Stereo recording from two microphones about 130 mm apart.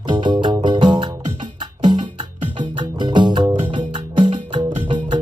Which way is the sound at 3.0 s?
35° right (ahead or behind).